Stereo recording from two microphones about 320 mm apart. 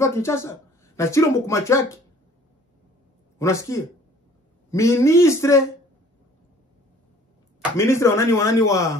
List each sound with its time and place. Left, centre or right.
0.0 s speech: centre
3.3 s speech: centre
7.7 s speech: centre